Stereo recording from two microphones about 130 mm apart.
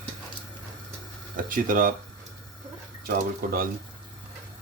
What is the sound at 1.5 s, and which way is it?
Speech, 90° right.